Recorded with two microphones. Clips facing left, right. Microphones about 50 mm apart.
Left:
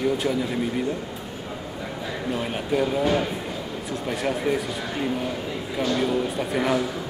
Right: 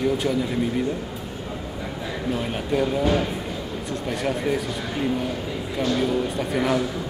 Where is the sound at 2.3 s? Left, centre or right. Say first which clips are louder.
Even; centre.